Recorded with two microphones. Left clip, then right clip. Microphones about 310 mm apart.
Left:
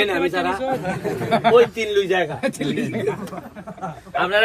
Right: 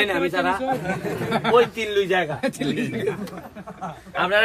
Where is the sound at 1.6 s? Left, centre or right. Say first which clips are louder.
Left 3 dB; centre.